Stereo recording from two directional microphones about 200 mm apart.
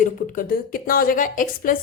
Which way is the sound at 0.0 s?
40° left (ahead or behind).